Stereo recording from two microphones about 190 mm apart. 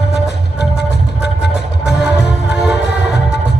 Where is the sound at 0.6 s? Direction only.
60° left (ahead or behind).